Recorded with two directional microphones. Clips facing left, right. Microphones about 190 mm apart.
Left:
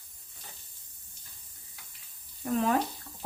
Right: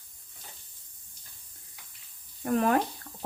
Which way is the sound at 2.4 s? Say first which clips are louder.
Right 2 dB; 60° right (ahead or behind).